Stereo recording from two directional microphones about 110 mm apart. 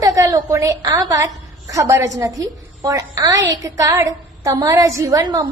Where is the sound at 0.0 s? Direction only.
30° right (ahead or behind).